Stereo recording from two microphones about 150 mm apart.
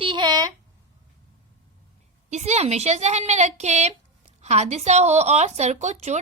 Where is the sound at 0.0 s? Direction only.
30° right (ahead or behind).